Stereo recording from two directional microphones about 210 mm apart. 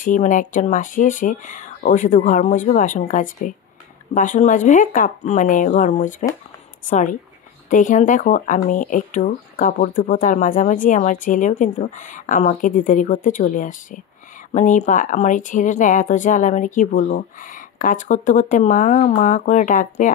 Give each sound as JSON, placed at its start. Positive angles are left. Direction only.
{"t": 0.0, "sound": "speech", "side_deg": 40}